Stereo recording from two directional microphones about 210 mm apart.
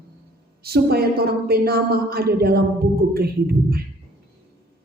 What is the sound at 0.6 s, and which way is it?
Speech, 50° right (ahead or behind).